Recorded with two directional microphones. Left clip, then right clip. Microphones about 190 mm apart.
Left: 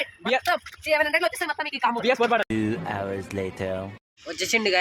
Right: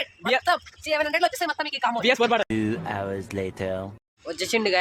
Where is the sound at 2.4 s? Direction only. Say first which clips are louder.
Even; centre (ahead or behind).